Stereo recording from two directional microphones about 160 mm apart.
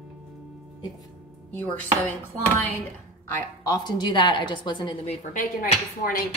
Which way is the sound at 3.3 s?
25° left (ahead or behind).